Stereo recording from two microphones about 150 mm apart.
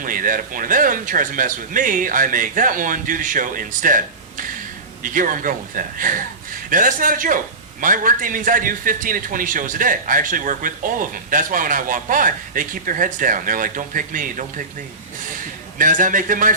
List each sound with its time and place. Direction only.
0.0 s a man's voice: 65° right (ahead or behind)
15.8 s a man's voice: 60° right (ahead or behind)